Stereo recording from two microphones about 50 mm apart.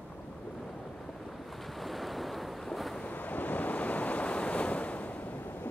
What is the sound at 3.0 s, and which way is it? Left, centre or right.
Waves, left.